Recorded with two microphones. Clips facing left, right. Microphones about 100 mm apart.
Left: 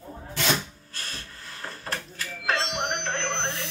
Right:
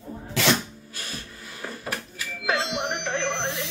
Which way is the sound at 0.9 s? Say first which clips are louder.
Right 2 dB; 10° right (ahead or behind).